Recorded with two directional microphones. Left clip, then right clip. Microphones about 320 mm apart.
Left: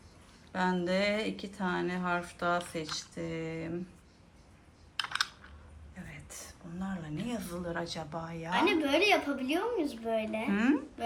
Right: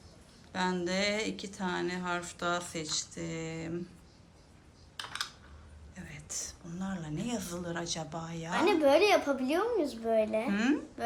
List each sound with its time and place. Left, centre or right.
0.5 s speech: centre
6.0 s speech: centre
8.8 s a child's voice: right
10.5 s speech: centre